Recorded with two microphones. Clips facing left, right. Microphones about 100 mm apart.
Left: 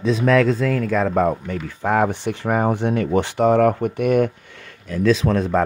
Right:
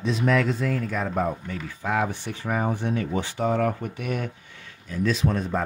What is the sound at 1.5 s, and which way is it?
Speech, 55° left (ahead or behind).